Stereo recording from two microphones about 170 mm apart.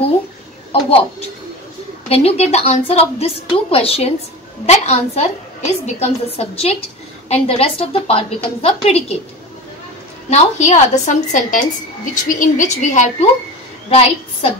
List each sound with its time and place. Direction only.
0.7 s a woman's voice: 35° left (ahead or behind)
2.0 s a woman's voice: 35° left (ahead or behind)
10.3 s a woman's voice: 45° left (ahead or behind)